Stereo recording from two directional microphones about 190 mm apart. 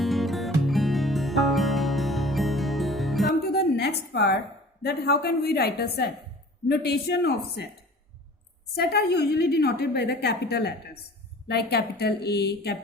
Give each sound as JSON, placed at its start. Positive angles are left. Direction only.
{"t": 0.0, "sound": "music", "side_deg": 0}
{"t": 3.4, "sound": "a sound", "side_deg": 60}
{"t": 4.8, "sound": "a woman's voice", "side_deg": 55}
{"t": 8.7, "sound": "a woman's voice", "side_deg": 55}